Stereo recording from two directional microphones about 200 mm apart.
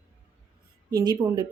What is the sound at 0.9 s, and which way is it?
Speech, 20° right (ahead or behind).